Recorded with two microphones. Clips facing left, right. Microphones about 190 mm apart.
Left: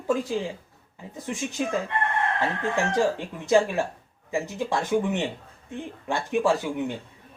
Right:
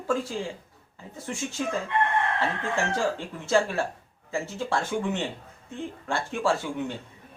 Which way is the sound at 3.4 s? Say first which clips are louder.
Left 3 dB; 15° left (ahead or behind).